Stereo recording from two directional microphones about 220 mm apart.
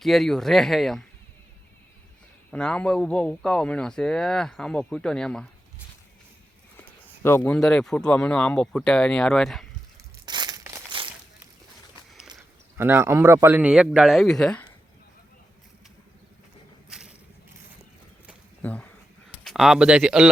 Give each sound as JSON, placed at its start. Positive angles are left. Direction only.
{"t": 0.0, "sound": "speech", "side_deg": 0}
{"t": 2.5, "sound": "speech", "side_deg": 5}
{"t": 6.7, "sound": "speech", "side_deg": 10}
{"t": 10.2, "sound": "crumpling", "side_deg": -20}
{"t": 12.7, "sound": "speech", "side_deg": -10}
{"t": 16.9, "sound": "vehicle", "side_deg": -5}
{"t": 18.6, "sound": "speech", "side_deg": 5}